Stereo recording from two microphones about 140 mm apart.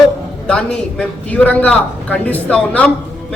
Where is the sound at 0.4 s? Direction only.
5° left (ahead or behind).